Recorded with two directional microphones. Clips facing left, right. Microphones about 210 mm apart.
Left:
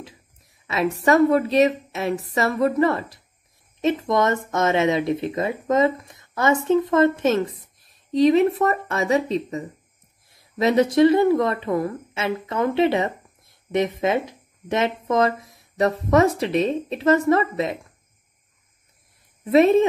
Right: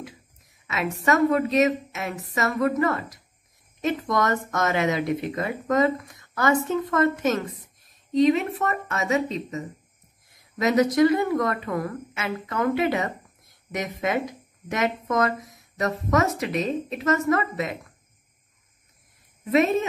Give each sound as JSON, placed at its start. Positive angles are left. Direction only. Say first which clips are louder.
{"t": 0.7, "sound": "a woman's voice", "louder": "left 4 dB", "side_deg": 30}
{"t": 19.4, "sound": "a woman's voice", "louder": "left 6 dB", "side_deg": 30}